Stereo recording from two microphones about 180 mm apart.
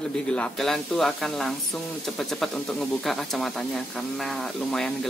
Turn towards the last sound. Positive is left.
turn(degrees=5)  # may be behind; listen again after turning